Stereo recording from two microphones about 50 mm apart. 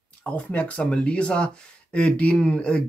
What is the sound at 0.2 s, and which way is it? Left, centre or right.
Speech, left.